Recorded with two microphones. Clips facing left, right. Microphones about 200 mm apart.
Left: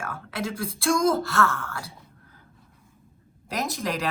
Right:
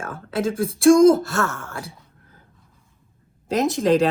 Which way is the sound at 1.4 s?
30° right (ahead or behind).